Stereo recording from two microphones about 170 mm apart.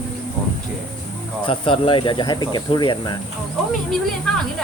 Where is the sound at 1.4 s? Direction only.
30° left (ahead or behind).